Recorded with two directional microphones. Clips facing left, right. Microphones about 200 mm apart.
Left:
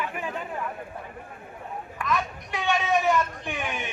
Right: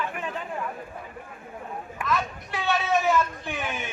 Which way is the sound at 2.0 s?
15° left (ahead or behind).